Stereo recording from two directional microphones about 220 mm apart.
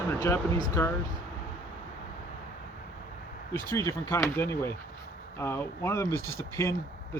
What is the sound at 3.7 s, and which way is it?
Speech, 10° left (ahead or behind).